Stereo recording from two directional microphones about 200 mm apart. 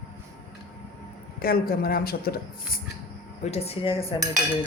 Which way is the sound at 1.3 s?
50° left (ahead or behind).